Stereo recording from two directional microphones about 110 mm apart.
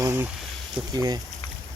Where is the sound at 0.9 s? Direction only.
35° right (ahead or behind).